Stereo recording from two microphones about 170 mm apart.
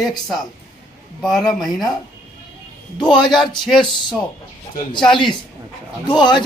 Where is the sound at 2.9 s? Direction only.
25° left (ahead or behind).